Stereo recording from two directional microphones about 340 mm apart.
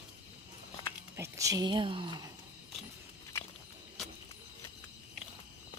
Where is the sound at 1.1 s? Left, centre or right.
Centre.